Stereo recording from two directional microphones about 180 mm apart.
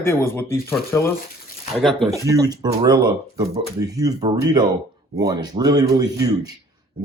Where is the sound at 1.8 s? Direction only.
Centre (ahead or behind).